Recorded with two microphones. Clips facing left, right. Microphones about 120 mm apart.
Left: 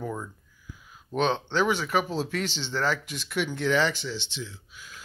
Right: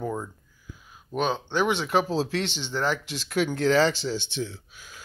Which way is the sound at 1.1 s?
10° right (ahead or behind).